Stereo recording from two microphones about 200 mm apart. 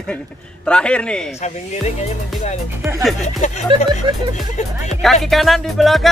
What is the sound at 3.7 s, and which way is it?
Speech, 25° right (ahead or behind).